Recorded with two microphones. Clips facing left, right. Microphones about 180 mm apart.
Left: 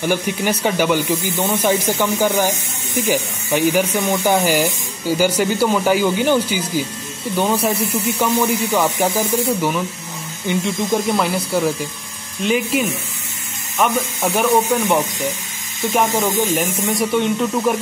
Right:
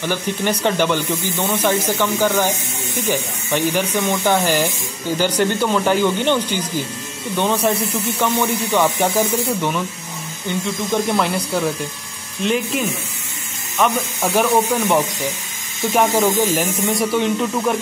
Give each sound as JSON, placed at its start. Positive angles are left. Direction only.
{"t": 0.0, "sound": "speech", "side_deg": 10}
{"t": 10.5, "sound": "speech", "side_deg": 15}
{"t": 11.1, "sound": "speech", "side_deg": 0}